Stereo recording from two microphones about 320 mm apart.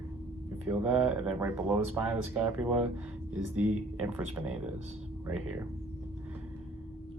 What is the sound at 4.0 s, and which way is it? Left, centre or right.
Speech, centre.